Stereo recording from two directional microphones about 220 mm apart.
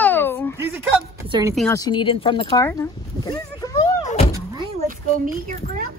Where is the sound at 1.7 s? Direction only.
20° left (ahead or behind).